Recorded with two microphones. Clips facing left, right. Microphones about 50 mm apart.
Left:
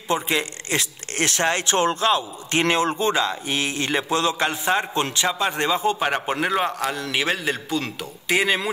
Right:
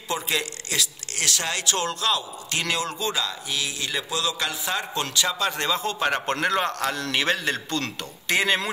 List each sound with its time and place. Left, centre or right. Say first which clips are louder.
0.1 s a man's voice: left 4 dB; left; by 8.6 s centre